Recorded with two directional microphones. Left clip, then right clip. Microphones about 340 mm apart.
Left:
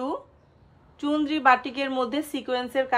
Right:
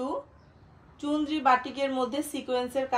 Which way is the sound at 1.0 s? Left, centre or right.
Centre.